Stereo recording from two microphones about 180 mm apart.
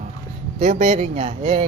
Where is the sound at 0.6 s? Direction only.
40° right (ahead or behind).